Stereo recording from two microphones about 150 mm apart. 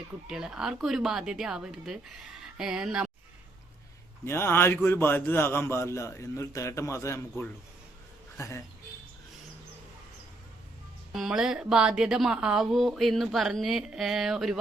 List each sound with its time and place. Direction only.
0.3 s speech: 5° right (ahead or behind)
4.3 s a man's voice: 15° left (ahead or behind)
11.1 s speech: 5° right (ahead or behind)